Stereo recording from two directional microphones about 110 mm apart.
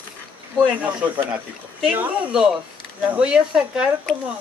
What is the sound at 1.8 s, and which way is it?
Speech, 10° right (ahead or behind).